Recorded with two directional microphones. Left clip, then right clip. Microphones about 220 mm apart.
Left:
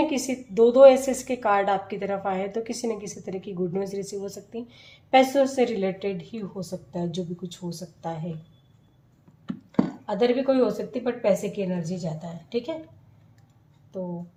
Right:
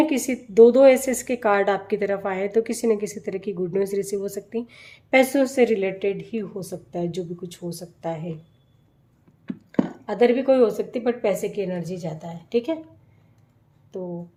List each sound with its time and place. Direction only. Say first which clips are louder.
0.1 s a woman's voice: right 3 dB; 50° right (ahead or behind)
10.1 s a woman's voice: right 5 dB; 45° right (ahead or behind)